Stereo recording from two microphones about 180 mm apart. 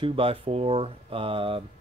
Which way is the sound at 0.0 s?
30° right (ahead or behind).